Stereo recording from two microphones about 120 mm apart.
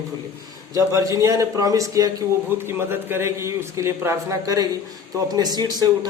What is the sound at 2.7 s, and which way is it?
A man's voice, 20° right (ahead or behind).